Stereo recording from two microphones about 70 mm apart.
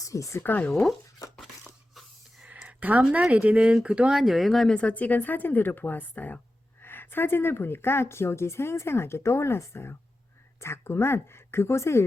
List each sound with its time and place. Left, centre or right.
0.0 s speech: left
0.4 s speech: left
0.7 s speech: centre
1.4 s a sound: centre
2.5 s speech: right; by 4.7 s centre
4.7 s a woman's voice: centre; by 12.0 s left